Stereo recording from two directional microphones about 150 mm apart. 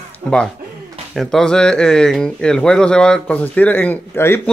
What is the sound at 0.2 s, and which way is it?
Speech, 35° right (ahead or behind).